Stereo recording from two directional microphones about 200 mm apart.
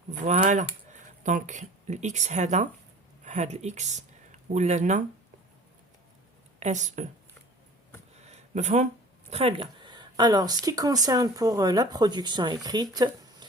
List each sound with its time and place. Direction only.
0.1 s speech: 35° right (ahead or behind)
6.6 s speech: 35° right (ahead or behind)
8.3 s a sound: 35° right (ahead or behind)
9.3 s speech: 30° right (ahead or behind)